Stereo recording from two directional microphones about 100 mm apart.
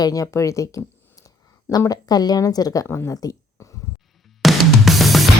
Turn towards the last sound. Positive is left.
turn(degrees=0)  # may be behind; listen again after turning